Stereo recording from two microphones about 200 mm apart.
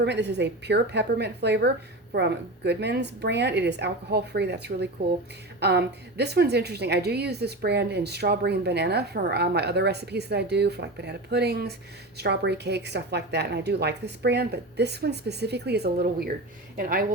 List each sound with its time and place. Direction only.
0.0 s a woman's voice: 60° right (ahead or behind)